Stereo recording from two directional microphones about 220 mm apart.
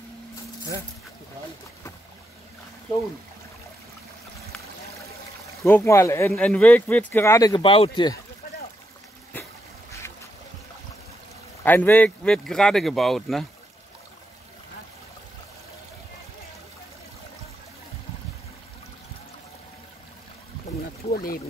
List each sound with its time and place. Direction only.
5.6 s speech: 10° left (ahead or behind)
11.6 s speech: 10° left (ahead or behind)
21.1 s pour: 40° left (ahead or behind)